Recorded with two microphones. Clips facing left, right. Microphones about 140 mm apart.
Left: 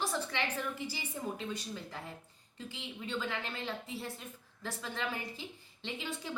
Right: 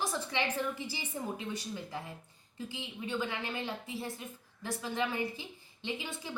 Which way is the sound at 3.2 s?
15° right (ahead or behind).